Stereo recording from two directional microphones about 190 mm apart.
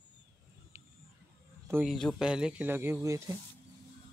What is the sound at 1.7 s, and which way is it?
A man's voice, 10° right (ahead or behind).